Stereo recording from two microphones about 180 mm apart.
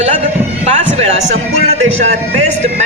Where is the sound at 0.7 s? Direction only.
35° right (ahead or behind).